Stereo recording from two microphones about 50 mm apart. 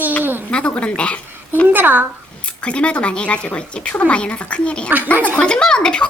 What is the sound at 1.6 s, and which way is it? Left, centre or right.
Speech, right.